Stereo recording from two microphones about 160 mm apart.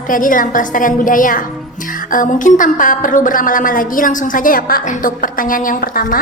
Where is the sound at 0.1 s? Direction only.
55° left (ahead or behind).